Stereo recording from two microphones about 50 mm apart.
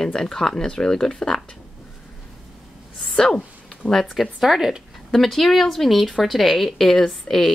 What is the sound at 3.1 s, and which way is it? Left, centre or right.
Speech, centre.